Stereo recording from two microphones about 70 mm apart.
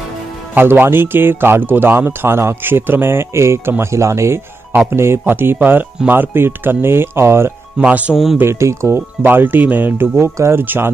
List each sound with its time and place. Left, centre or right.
0.6 s speech: right
7.8 s speech: centre
8.1 s speech: centre
8.4 s speech: right
9.2 s speech: right
10.6 s speech: right